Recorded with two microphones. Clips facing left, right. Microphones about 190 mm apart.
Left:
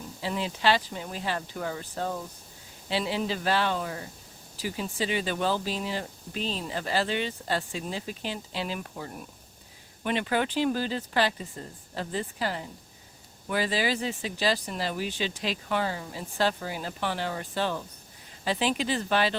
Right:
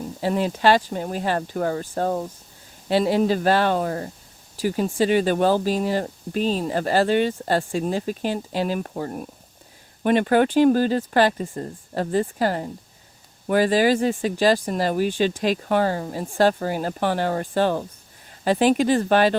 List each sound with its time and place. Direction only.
0.2 s speech: 50° right (ahead or behind)